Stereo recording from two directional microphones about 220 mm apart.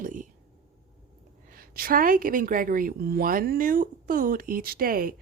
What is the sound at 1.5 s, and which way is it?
A woman's voice, 40° right (ahead or behind).